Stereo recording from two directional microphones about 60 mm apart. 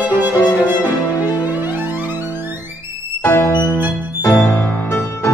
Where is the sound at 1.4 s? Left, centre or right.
Right.